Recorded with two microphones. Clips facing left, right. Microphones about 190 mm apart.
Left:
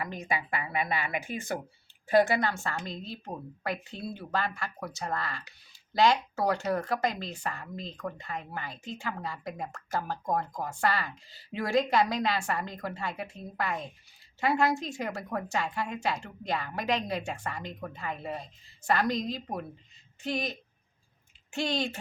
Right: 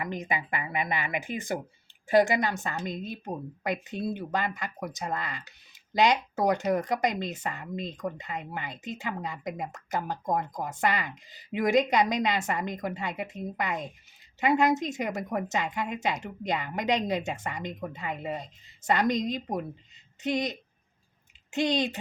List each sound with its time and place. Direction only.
0.0 s speech: 20° right (ahead or behind)